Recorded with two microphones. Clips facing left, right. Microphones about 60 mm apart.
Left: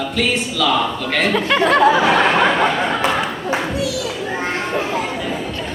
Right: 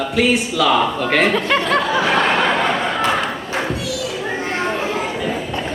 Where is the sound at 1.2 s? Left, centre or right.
Centre.